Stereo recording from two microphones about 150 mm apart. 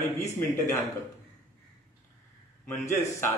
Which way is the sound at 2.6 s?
15° left (ahead or behind).